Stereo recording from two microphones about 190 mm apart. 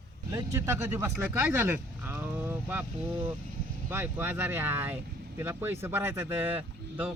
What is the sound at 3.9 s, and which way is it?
Speech, 10° right (ahead or behind).